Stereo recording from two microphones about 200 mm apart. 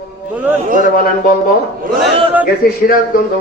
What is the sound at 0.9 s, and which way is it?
Speech, 45° left (ahead or behind).